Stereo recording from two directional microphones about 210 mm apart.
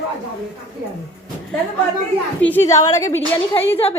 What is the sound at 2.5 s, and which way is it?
Speech, 15° left (ahead or behind).